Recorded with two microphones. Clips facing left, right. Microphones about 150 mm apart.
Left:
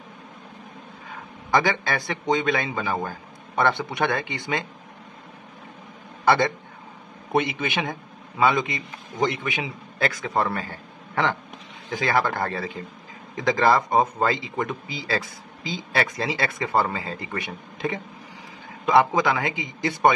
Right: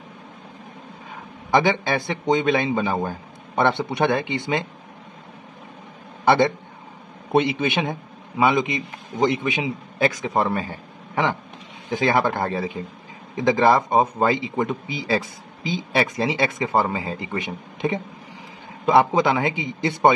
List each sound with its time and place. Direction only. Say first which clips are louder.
1.5 s a man's voice: right 3 dB; 20° right (ahead or behind)
6.2 s a man's voice: right 3 dB; 20° right (ahead or behind)